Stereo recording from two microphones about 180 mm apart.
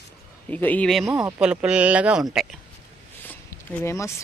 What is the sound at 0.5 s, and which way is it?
Speech, 10° left (ahead or behind).